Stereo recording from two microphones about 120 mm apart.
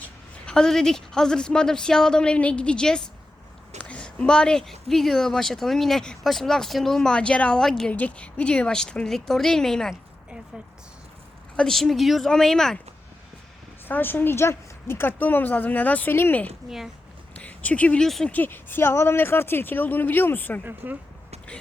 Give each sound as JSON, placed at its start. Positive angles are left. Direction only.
{"t": 0.0, "sound": "speech", "side_deg": 5}
{"t": 11.5, "sound": "speech", "side_deg": 5}
{"t": 13.8, "sound": "a woman's voice", "side_deg": 15}
{"t": 16.6, "sound": "speech", "side_deg": -5}
{"t": 17.3, "sound": "speech", "side_deg": 10}
{"t": 18.3, "sound": "a woman's voice", "side_deg": 15}
{"t": 20.7, "sound": "speech", "side_deg": -15}